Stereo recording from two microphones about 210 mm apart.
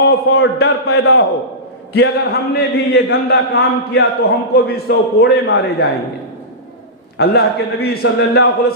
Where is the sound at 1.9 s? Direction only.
50° left (ahead or behind).